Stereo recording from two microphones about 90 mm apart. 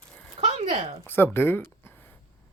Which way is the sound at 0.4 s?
90° right.